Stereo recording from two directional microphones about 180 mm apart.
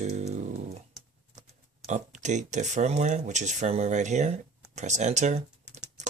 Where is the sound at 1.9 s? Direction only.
40° right (ahead or behind).